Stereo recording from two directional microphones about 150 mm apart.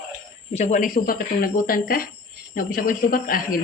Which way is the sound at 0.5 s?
50° left (ahead or behind).